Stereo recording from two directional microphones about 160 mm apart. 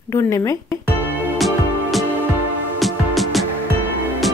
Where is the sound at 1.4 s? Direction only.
Centre (ahead or behind).